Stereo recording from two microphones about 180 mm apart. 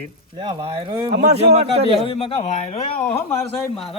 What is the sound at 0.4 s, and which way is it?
Speech, 30° right (ahead or behind).